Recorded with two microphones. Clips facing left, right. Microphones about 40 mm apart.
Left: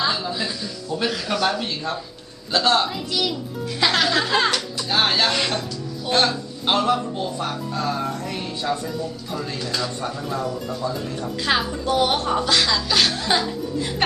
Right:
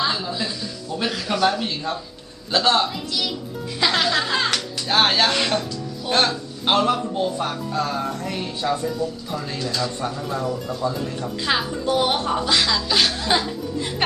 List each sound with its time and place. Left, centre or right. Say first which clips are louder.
0.0 s speech: even; centre
4.9 s speech: right 2 dB; centre
5.2 s speech: right 1 dB; centre